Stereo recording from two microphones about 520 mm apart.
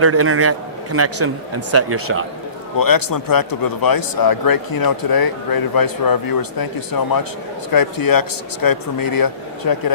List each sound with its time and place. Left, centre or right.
0.0 s speech: right
2.7 s a man's voice: left